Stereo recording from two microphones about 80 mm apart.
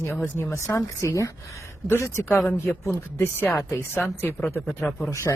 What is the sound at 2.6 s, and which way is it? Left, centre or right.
Speech, left.